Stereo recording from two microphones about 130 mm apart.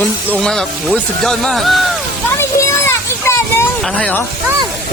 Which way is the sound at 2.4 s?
20° left (ahead or behind).